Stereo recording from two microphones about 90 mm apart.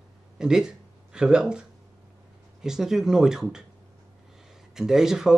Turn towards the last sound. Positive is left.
turn(degrees=-5)  # may be behind; listen again after turning